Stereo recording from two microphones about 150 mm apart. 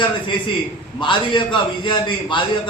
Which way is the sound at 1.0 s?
30° left (ahead or behind).